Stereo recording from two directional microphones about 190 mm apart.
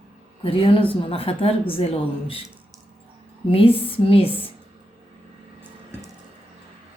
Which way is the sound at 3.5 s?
30° left (ahead or behind).